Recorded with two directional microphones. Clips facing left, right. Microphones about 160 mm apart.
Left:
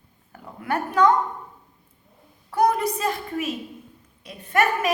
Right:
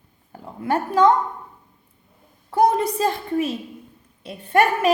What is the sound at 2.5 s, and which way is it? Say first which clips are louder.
Speech: right 3 dB; 25° right (ahead or behind).